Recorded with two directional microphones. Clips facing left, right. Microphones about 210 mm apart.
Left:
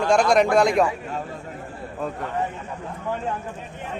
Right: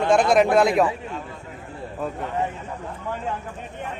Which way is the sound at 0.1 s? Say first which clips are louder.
Right 1 dB; 5° right (ahead or behind).